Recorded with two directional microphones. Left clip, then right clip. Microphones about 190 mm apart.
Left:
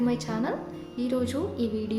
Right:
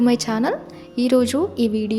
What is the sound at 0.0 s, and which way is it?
A woman's voice, 45° right (ahead or behind).